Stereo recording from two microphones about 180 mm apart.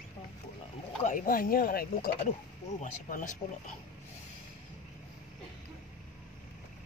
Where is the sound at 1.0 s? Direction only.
50° left (ahead or behind).